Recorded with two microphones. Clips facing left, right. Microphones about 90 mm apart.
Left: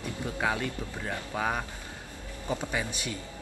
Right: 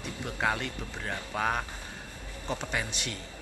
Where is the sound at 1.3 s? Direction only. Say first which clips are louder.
Right 1 dB; centre (ahead or behind).